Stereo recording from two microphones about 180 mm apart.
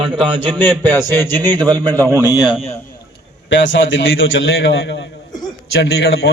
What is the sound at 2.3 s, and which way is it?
Speech, 25° left (ahead or behind).